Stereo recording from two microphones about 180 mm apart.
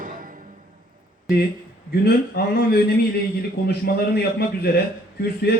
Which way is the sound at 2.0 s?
60° left (ahead or behind).